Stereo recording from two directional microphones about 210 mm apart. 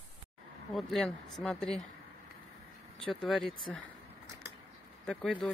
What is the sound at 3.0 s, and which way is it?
Speech, centre (ahead or behind).